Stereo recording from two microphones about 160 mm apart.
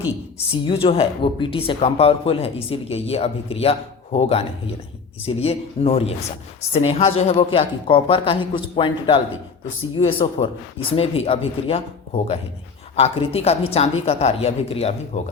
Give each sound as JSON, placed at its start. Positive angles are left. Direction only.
{"t": 0.6, "sound": "speech", "side_deg": 30}